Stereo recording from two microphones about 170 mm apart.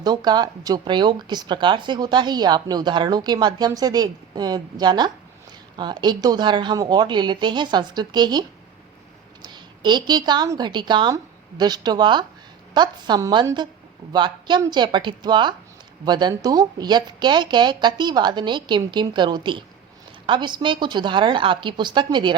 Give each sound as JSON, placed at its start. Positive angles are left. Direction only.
{"t": 0.0, "sound": "a woman's voice", "side_deg": -25}